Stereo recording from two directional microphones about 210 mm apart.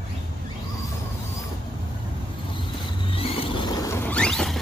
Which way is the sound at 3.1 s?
25° left (ahead or behind).